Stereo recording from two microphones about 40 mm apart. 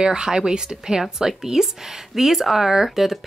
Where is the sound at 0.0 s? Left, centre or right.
Centre.